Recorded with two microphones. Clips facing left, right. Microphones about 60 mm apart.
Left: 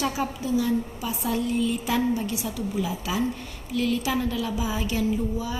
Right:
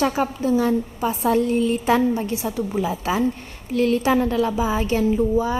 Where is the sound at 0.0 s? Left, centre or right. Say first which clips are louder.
Right 6 dB; right.